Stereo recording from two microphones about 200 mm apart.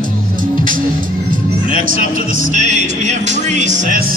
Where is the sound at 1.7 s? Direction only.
45° right (ahead or behind).